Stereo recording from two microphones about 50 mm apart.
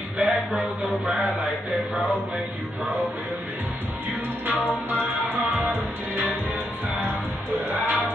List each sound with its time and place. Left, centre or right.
0.2 s a sound: right
4.6 s music: left
5.6 s music: right
7.5 s music: right